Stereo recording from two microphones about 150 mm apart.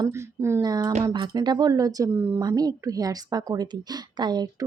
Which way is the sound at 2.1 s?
15° right (ahead or behind).